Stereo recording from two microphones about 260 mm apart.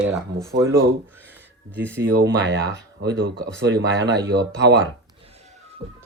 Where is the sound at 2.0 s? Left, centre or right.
Right.